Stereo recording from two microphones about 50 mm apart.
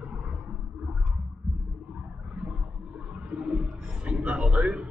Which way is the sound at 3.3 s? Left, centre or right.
Right.